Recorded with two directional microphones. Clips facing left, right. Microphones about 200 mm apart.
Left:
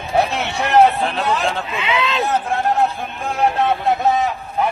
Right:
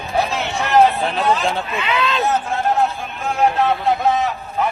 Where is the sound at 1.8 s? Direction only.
20° left (ahead or behind).